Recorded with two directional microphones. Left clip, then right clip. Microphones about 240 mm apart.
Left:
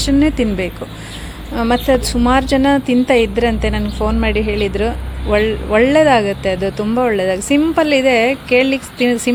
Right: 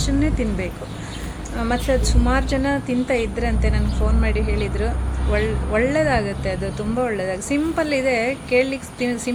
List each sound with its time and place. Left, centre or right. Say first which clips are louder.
0.0 s speech: left 8 dB; left